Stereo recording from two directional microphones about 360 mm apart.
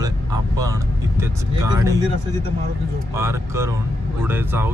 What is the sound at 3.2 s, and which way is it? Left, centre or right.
Speech, centre.